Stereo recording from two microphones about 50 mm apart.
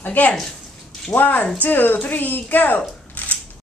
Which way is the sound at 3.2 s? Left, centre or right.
Left.